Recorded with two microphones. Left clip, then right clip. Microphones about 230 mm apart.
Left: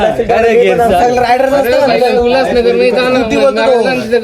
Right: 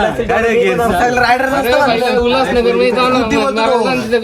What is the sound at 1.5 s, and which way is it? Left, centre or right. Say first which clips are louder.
Speech: left 3 dB; right.